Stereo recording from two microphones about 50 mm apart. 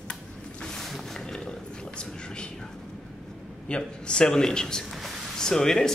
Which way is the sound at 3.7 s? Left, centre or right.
Centre.